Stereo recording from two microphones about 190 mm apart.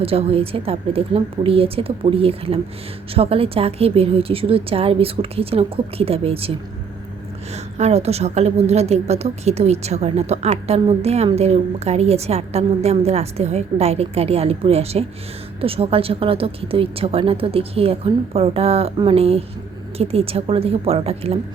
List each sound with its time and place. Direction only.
0.0 s a woman's voice: 30° right (ahead or behind)
7.5 s a woman's voice: 35° right (ahead or behind)